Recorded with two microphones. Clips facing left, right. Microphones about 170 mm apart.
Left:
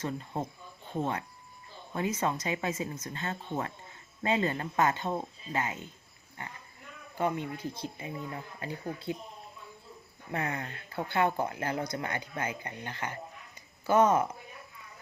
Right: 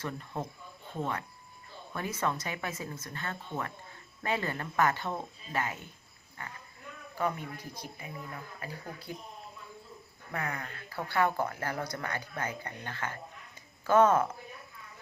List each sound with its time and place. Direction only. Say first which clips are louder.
0.0 s speech: left 3 dB; 20° left (ahead or behind)
1.9 s speech: left 3 dB; 20° left (ahead or behind)
10.3 s speech: left 3 dB; 25° left (ahead or behind)